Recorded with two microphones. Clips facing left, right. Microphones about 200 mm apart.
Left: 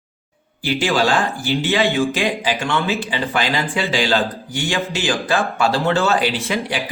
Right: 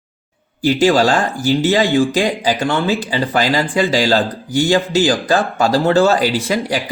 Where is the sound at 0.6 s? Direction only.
40° right (ahead or behind).